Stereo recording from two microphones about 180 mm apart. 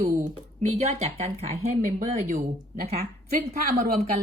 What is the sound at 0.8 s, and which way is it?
Speech, 35° right (ahead or behind).